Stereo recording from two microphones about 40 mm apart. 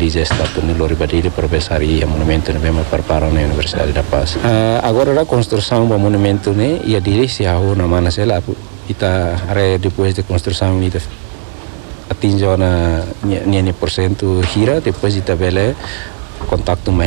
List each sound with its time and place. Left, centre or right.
0.0 s speech: centre
8.1 s speech: centre
12.1 s speech: centre